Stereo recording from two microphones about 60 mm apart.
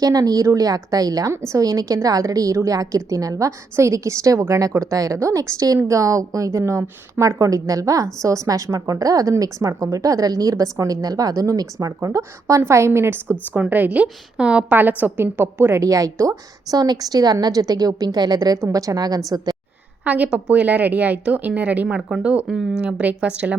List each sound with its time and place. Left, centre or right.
0.0 s a woman's voice: right
1.3 s a woman's voice: right
1.5 s a woman's voice: right
9.4 s a woman's voice: right
12.0 s a woman's voice: right
13.5 s a woman's voice: right
15.8 s a woman's voice: right
20.1 s a woman's voice: right
22.4 s speech: centre
22.8 s a woman's voice: centre